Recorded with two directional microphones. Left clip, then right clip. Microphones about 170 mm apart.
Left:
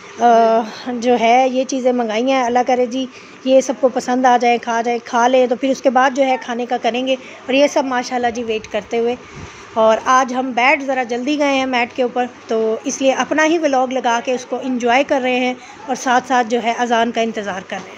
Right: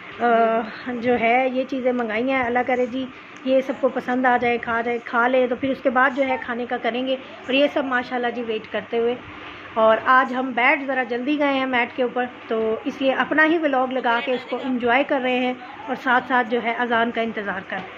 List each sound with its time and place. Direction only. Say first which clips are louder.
0.2 s speech: left 7 dB; 20° left (ahead or behind)